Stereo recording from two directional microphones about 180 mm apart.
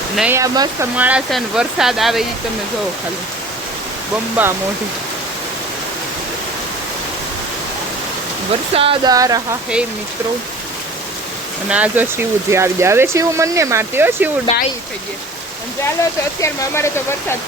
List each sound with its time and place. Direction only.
0.2 s speech: 15° right (ahead or behind)
0.9 s speech: 5° right (ahead or behind)
4.4 s speech: 10° right (ahead or behind)
8.7 s speech: 30° right (ahead or behind)
9.1 s speech: 20° right (ahead or behind)
11.7 s speech: 10° right (ahead or behind)
14.5 s speech: 35° left (ahead or behind)
16.4 s speech: 15° left (ahead or behind)